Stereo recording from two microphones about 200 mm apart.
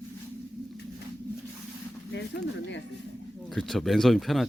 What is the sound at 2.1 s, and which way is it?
Speech, 60° left (ahead or behind).